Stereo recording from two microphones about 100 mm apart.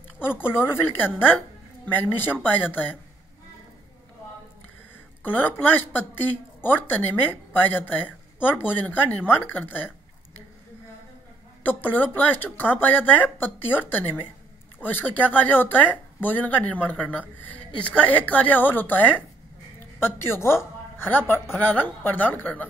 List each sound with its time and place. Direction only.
0.5 s a woman's voice: 20° left (ahead or behind)
5.2 s a woman's voice: 20° left (ahead or behind)
11.6 s a woman's voice: 20° left (ahead or behind)